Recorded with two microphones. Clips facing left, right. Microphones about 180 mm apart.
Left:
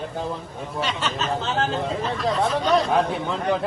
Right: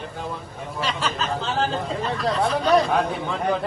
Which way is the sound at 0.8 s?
Centre (ahead or behind).